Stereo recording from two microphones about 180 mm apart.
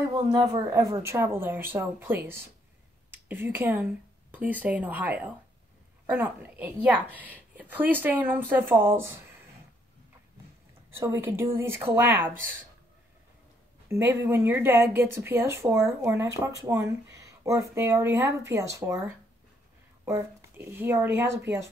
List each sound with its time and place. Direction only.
0.2 s a woman's voice: 25° right (ahead or behind)
11.0 s a woman's voice: 15° right (ahead or behind)
13.8 s a woman's voice: 15° right (ahead or behind)